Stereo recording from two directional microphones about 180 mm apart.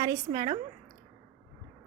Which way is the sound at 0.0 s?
20° right (ahead or behind).